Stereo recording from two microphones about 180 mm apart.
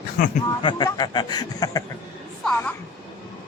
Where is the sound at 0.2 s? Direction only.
50° left (ahead or behind).